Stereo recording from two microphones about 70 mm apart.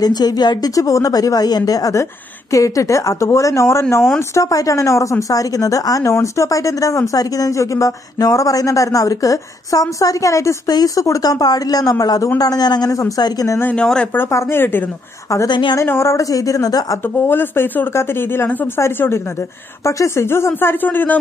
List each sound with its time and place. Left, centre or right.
0.0 s speech: left
0.7 s speech: left
2.5 s speech: left
4.3 s speech: left
6.1 s speech: left
10.7 s speech: left
13.2 s speech: left
13.7 s speech: centre
14.3 s speech: left
15.4 s speech: left
15.8 s speech: left
17.3 s speech: left
19.8 s speech: left
20.2 s speech: left